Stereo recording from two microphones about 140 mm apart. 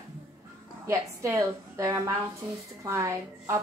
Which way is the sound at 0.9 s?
20° right (ahead or behind).